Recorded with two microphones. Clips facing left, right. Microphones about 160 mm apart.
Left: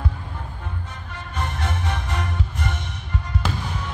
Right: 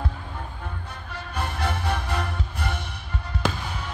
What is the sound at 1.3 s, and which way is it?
Music, 10° right (ahead or behind).